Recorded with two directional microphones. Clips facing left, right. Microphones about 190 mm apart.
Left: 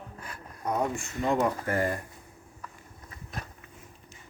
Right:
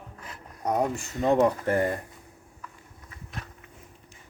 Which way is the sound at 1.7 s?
25° right (ahead or behind).